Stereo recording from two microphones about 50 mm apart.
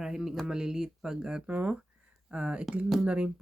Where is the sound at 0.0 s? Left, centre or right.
Centre.